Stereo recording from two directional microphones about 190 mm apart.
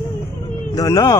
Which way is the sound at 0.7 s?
20° left (ahead or behind).